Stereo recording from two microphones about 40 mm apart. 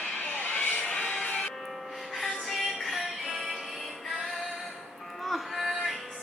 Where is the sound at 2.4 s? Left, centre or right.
Centre.